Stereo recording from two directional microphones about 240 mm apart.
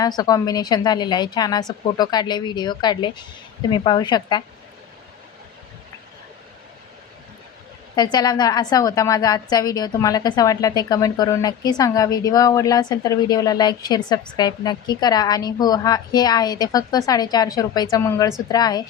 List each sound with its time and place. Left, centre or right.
0.0 s a woman's voice: centre
7.9 s a woman's voice: centre